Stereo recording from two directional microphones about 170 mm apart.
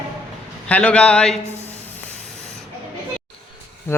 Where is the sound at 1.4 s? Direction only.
40° left (ahead or behind).